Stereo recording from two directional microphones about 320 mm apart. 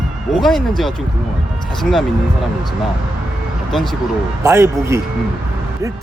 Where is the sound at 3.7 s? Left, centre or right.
Centre.